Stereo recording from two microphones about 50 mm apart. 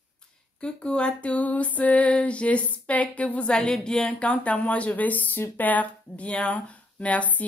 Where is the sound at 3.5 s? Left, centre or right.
Centre.